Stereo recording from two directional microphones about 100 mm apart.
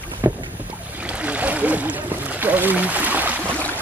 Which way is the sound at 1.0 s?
15° right (ahead or behind).